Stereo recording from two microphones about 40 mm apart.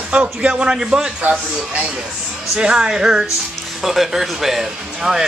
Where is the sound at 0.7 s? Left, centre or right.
Centre.